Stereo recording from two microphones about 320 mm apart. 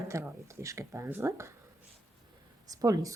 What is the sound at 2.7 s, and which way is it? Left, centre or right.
Speech, centre.